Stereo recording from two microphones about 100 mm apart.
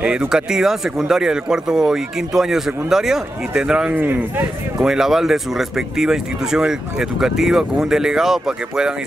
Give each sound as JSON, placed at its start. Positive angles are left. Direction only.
{"t": 0.0, "sound": "speech", "side_deg": -10}
{"t": 4.0, "sound": "speech", "side_deg": -20}
{"t": 4.7, "sound": "speech", "side_deg": -5}